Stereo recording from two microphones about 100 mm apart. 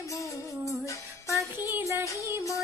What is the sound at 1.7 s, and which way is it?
Music, 25° right (ahead or behind).